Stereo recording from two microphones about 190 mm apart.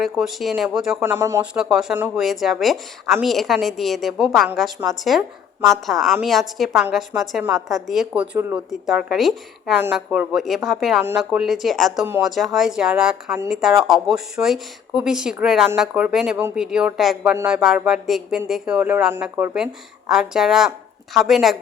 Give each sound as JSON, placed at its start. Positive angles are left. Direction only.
{"t": 0.0, "sound": "speech", "side_deg": 0}
{"t": 1.1, "sound": "speech", "side_deg": -15}
{"t": 1.5, "sound": "speech", "side_deg": -5}